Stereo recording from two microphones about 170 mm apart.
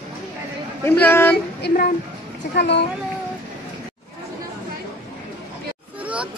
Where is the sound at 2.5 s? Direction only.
85° left.